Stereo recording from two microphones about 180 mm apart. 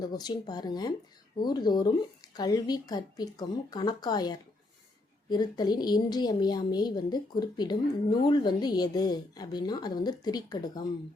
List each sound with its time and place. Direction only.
0.0 s speech: 20° left (ahead or behind)